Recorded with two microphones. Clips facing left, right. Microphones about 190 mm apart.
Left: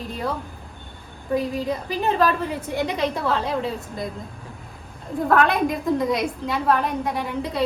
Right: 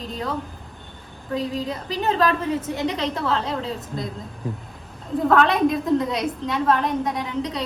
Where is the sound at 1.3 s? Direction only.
5° left (ahead or behind).